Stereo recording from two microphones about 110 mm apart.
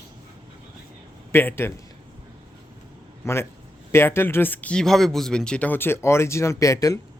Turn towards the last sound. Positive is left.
turn(degrees=30)  # may be behind; listen again after turning